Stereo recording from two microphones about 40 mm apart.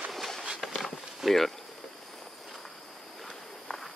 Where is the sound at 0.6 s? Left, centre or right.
Centre.